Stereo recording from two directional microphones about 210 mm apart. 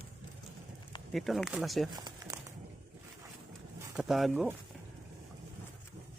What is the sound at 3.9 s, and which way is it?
Speech, centre (ahead or behind).